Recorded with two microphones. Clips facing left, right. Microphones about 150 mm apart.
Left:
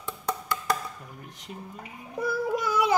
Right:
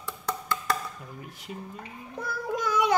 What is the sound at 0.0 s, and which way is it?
Wood block, 15° left (ahead or behind).